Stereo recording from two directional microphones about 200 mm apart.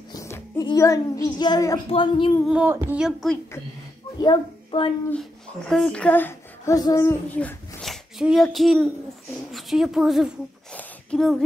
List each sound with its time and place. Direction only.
0.1 s a child's voice: 15° left (ahead or behind)
2.4 s speech: 5° right (ahead or behind)
4.2 s a child's voice: 25° left (ahead or behind)
5.7 s speech: 5° left (ahead or behind)
9.5 s a sound: centre (ahead or behind)